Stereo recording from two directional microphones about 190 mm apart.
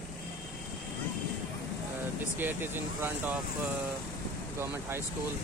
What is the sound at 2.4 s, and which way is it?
Speech, 10° right (ahead or behind).